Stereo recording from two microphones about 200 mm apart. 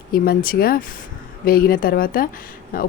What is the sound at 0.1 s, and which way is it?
Speech, 45° left (ahead or behind).